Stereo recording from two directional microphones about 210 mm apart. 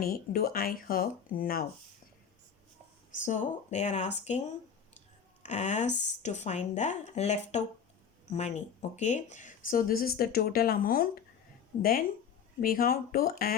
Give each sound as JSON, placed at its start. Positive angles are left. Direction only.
{"t": 0.0, "sound": "speech", "side_deg": 45}
{"t": 3.2, "sound": "speech", "side_deg": 35}